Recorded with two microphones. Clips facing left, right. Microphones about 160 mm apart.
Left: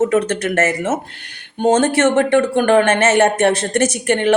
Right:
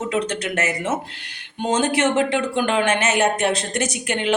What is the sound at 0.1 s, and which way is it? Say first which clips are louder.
Speech: left 6 dB; 50° left (ahead or behind).